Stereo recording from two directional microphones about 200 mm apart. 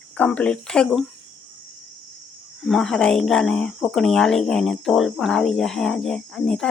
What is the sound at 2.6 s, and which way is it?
Speech, centre (ahead or behind).